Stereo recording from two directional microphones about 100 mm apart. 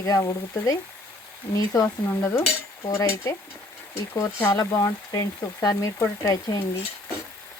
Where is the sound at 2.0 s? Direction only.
25° left (ahead or behind).